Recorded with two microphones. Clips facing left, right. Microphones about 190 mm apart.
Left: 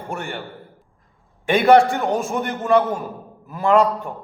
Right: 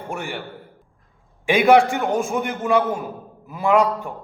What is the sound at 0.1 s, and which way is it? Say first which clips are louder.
A man's voice: even; centre (ahead or behind).